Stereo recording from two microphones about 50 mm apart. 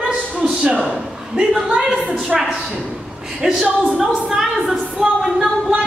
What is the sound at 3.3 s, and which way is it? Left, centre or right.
A woman's voice, centre.